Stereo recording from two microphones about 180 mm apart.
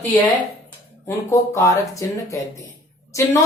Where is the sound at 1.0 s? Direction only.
15° left (ahead or behind).